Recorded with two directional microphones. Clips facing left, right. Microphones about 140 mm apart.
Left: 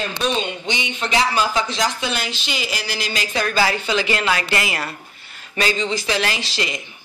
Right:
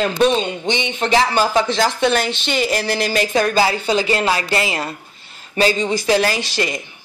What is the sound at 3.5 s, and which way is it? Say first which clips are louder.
Speech: right 3 dB; 25° right (ahead or behind).